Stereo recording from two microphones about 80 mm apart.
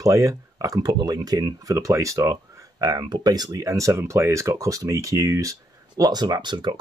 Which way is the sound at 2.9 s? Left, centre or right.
Right.